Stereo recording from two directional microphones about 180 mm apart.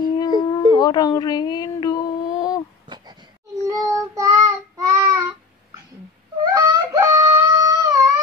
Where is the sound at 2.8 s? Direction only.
25° right (ahead or behind).